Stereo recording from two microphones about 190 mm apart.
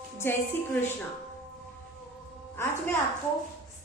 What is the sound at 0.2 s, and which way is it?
Speech, 10° left (ahead or behind).